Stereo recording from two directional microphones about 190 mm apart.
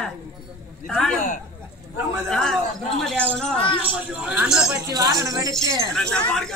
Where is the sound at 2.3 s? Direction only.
Centre (ahead or behind).